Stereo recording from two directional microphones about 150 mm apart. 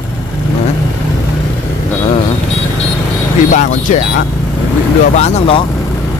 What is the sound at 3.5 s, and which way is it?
Speech, 55° left (ahead or behind).